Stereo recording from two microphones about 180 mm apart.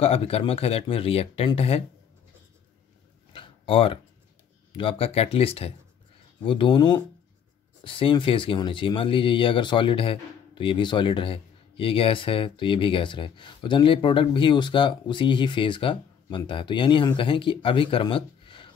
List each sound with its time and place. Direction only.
0.0 s speech: 35° left (ahead or behind)
3.3 s a sound: 30° left (ahead or behind)
4.7 s speech: 30° left (ahead or behind)